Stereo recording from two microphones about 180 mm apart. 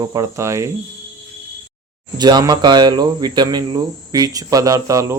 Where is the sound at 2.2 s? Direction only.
25° right (ahead or behind).